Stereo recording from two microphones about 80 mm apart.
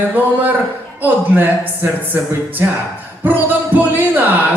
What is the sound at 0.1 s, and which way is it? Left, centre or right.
Speech, right.